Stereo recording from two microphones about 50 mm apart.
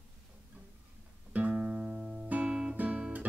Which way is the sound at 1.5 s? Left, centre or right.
Right.